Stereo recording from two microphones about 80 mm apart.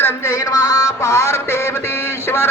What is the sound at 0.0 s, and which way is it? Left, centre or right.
Music, left.